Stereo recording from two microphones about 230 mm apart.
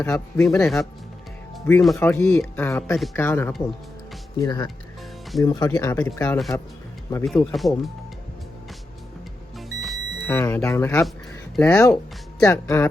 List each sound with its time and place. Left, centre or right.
0.0 s speech: centre
0.6 s speech: centre
9.6 s music: centre
10.2 s speech: centre